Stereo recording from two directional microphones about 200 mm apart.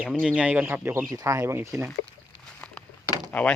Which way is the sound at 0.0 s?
5° right (ahead or behind).